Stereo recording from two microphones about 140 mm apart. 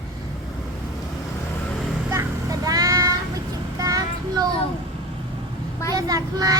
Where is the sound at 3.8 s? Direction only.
25° right (ahead or behind).